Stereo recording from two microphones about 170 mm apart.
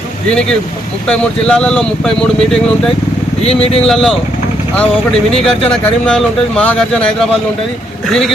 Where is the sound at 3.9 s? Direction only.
5° left (ahead or behind).